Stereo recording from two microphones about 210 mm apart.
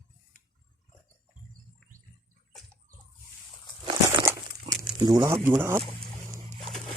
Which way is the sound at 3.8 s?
20° right (ahead or behind).